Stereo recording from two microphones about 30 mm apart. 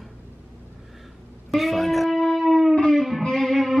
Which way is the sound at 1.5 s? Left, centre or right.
Centre.